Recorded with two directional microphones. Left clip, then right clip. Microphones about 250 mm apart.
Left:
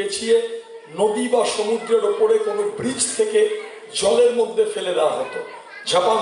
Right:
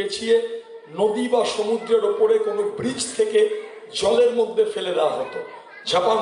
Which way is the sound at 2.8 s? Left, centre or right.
Centre.